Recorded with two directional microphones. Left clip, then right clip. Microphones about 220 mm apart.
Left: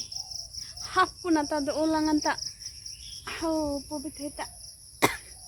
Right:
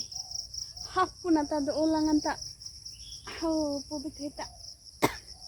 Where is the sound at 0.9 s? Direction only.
10° left (ahead or behind).